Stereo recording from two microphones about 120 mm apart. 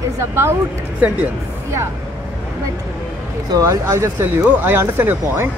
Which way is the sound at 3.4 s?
25° right (ahead or behind).